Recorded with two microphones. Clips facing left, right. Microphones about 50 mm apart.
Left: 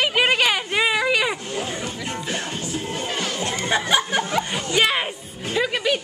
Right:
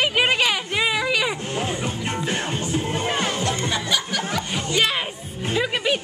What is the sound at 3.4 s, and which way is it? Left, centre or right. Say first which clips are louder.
Chuckle: left 1 dB; left.